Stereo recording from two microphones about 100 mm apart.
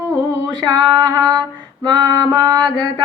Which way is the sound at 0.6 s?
50° right (ahead or behind).